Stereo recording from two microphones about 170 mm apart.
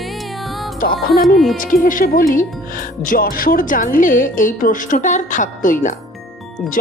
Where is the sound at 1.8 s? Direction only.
55° left (ahead or behind).